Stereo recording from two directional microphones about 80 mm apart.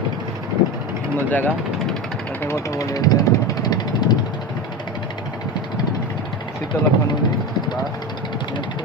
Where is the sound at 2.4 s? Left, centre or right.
Left.